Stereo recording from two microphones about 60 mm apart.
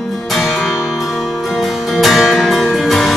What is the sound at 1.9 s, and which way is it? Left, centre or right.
Music, centre.